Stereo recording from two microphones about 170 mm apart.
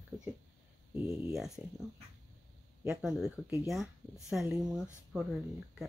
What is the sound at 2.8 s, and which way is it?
Speech, 5° right (ahead or behind).